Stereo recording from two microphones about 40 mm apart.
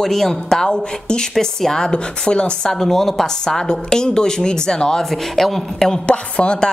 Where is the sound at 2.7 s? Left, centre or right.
Centre.